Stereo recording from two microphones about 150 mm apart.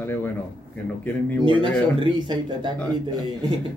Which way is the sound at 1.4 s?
35° right (ahead or behind).